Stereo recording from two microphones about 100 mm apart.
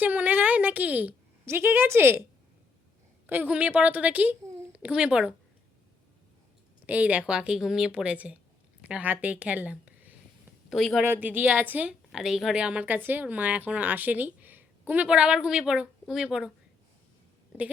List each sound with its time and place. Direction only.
0.0 s a woman's voice: 15° right (ahead or behind)
3.2 s a woman's voice: 20° right (ahead or behind)
6.8 s a woman's voice: 15° right (ahead or behind)
10.7 s speech: centre (ahead or behind)
11.0 s a woman's voice: 20° right (ahead or behind)
12.1 s a woman's voice: 5° right (ahead or behind)